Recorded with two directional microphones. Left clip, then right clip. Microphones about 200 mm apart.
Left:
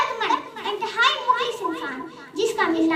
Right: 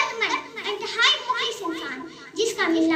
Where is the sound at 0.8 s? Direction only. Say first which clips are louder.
Left 3 dB; 60° left (ahead or behind).